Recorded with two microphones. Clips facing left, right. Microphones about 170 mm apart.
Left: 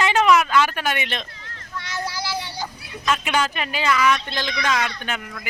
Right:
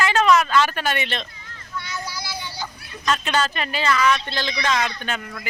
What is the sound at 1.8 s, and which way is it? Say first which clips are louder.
Child singing: left 5 dB; 90° left.